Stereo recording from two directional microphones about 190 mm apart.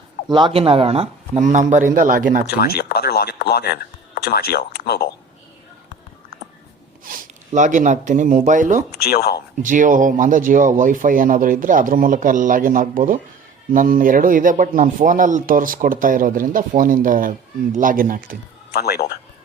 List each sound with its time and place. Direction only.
0.3 s speech: 25° right (ahead or behind); by 2.5 s 45° right (ahead or behind)
2.5 s speech: 55° left (ahead or behind)
7.0 s speech: 45° right (ahead or behind)
8.9 s speech: 55° left (ahead or behind)
9.6 s speech: 45° right (ahead or behind)
18.8 s speech: 55° left (ahead or behind)